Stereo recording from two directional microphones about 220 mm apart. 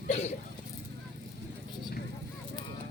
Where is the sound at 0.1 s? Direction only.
30° left (ahead or behind).